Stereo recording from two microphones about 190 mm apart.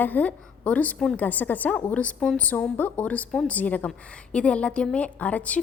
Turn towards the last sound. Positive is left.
turn(degrees=5)  # may be behind; listen again after turning